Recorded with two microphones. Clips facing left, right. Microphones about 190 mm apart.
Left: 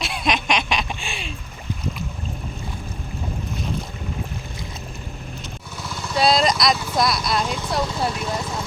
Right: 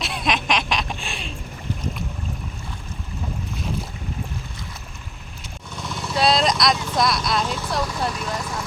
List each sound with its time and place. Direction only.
0.0 s a sound: centre (ahead or behind)
5.7 s vehicle: centre (ahead or behind)
8.2 s vehicle: 25° left (ahead or behind)